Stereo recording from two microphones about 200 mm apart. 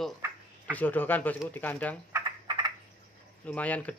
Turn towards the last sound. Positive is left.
turn(degrees=5)  # may be behind; listen again after turning